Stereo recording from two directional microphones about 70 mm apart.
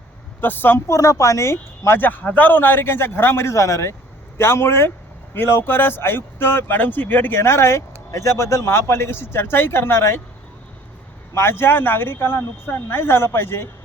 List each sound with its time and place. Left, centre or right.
0.4 s speech: left
0.9 s speech: left
11.3 s speech: left